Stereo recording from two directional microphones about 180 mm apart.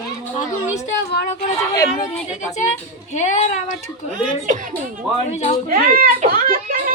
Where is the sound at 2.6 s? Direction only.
40° left (ahead or behind).